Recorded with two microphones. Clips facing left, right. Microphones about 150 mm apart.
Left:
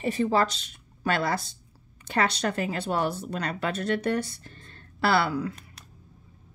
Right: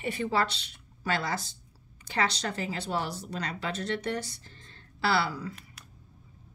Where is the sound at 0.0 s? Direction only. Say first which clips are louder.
Left 5 dB; 40° left (ahead or behind); by 5.5 s 55° left (ahead or behind).